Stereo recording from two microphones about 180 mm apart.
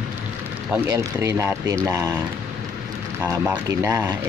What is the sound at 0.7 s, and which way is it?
Speech, 15° right (ahead or behind).